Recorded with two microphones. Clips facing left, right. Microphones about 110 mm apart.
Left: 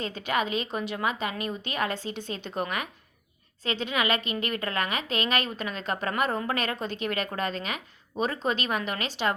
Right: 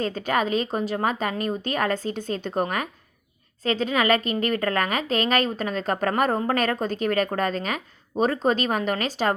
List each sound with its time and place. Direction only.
0.0 s speech: 40° right (ahead or behind)